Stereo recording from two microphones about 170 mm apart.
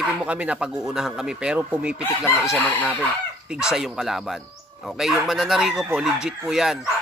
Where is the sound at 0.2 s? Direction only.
5° right (ahead or behind).